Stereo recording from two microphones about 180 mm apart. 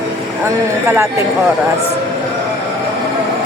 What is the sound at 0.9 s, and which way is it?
Speech, 15° right (ahead or behind).